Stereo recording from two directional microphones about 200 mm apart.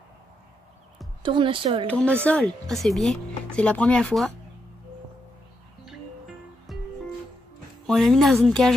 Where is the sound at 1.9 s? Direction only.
5° left (ahead or behind).